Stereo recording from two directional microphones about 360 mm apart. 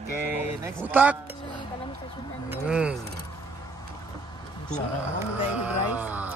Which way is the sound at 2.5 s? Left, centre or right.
Centre.